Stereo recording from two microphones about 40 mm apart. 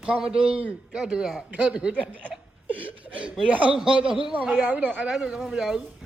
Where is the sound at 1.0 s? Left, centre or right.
Centre.